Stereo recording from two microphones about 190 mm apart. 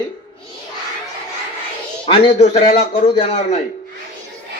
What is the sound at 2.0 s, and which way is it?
A man's voice, 30° left (ahead or behind).